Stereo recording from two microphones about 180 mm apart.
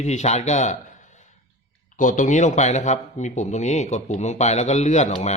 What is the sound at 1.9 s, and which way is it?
A man's voice, 45° left (ahead or behind).